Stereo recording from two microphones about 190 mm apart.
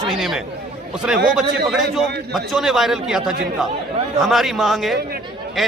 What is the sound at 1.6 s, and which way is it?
A man's voice, centre (ahead or behind).